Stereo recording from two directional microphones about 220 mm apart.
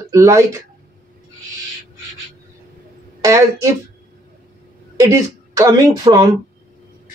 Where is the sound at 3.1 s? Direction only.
15° right (ahead or behind).